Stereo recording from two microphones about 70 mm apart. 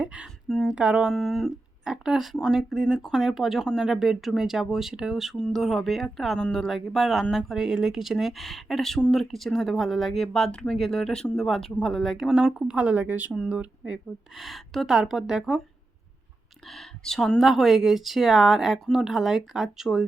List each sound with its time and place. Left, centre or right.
0.0 s a sound: centre
0.4 s speech: centre
0.7 s speech: centre
1.1 s speech: centre
12.6 s speech: centre
14.3 s speech: centre
16.6 s speech: centre